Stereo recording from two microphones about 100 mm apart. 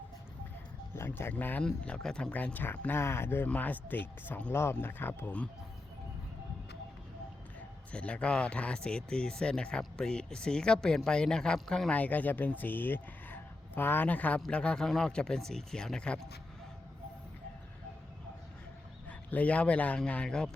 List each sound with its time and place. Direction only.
0.9 s speech: 25° left (ahead or behind); by 2.3 s 5° left (ahead or behind)
2.3 s speech: 15° left (ahead or behind)
7.9 s speech: 10° left (ahead or behind)
19.0 s speech: 15° left (ahead or behind)